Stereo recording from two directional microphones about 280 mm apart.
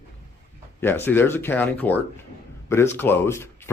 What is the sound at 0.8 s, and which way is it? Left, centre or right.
Speech, centre.